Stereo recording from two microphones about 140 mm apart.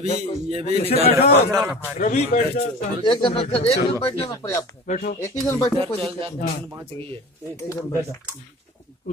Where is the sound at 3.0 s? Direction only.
35° left (ahead or behind).